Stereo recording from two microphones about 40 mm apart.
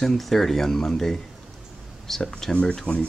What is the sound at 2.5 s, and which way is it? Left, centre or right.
Speech, left.